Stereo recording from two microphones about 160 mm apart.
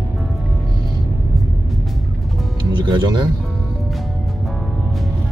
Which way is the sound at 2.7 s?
30° right (ahead or behind).